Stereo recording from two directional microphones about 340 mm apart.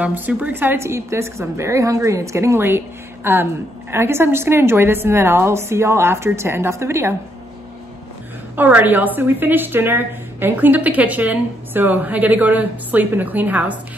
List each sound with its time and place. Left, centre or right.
0.0 s a woman's voice: centre
8.5 s a woman's voice: centre